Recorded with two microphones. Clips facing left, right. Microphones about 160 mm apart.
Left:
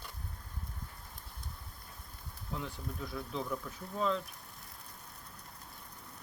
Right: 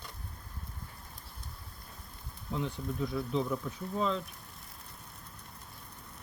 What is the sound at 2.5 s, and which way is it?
Speech, centre (ahead or behind).